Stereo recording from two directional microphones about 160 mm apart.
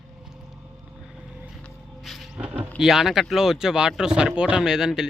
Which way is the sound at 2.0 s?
Centre (ahead or behind).